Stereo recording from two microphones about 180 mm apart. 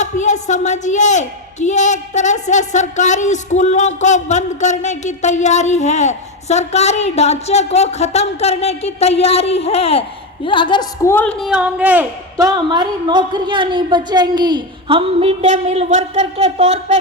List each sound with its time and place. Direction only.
0.0 s a woman's voice: 40° left (ahead or behind); by 12.0 s 10° right (ahead or behind)
12.4 s a woman's voice: 20° right (ahead or behind); by 17.0 s 40° right (ahead or behind)